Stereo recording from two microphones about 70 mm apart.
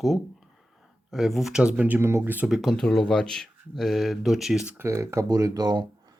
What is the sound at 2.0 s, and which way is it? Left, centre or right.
Speech, right.